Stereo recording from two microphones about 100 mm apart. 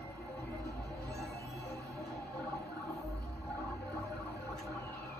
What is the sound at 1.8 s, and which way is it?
Music, 35° right (ahead or behind).